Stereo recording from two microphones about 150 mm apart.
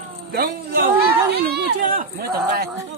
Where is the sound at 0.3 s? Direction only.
90° right.